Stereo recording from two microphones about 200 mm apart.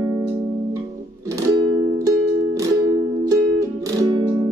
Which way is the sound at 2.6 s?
15° right (ahead or behind).